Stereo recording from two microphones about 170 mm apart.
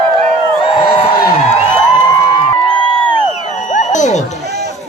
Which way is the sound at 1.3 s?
35° left (ahead or behind).